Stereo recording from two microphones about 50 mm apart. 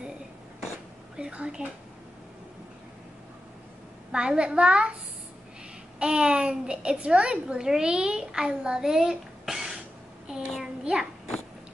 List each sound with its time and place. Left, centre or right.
4.1 s a child's voice: centre
5.9 s a child's voice: right
10.2 s child singing: centre